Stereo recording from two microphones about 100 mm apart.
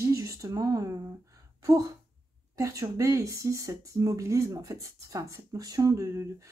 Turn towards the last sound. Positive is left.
turn(degrees=-35)  # may be behind; listen again after turning